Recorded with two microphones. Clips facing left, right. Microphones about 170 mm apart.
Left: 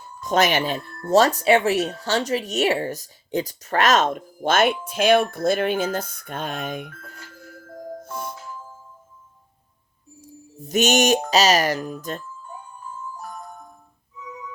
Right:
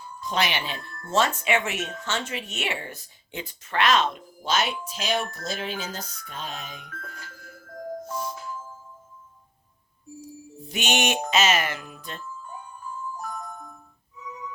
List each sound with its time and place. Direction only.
0.2 s speech: 45° left (ahead or behind)
8.1 s music: 55° left (ahead or behind)
10.2 s speech: 45° left (ahead or behind)